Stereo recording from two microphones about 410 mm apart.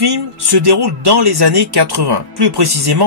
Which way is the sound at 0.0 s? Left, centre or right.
Right.